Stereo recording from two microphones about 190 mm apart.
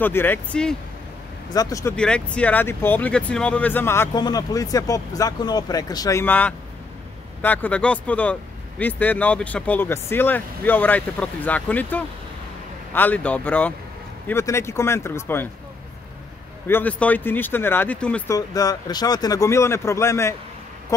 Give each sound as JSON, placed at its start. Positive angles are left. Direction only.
{"t": 0.0, "sound": "speech", "side_deg": 10}
{"t": 1.5, "sound": "speech", "side_deg": 20}
{"t": 2.0, "sound": "speech", "side_deg": 5}
{"t": 16.6, "sound": "speech", "side_deg": 10}